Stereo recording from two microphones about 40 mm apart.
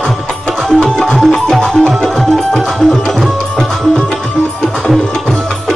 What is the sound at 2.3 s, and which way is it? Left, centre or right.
Tabla, centre.